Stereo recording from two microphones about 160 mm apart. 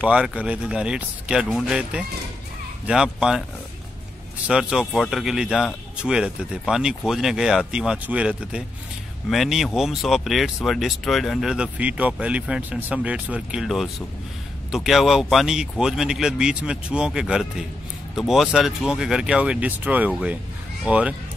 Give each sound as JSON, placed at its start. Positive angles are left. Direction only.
{"t": 0.0, "sound": "speech", "side_deg": -5}
{"t": 4.5, "sound": "speech", "side_deg": -5}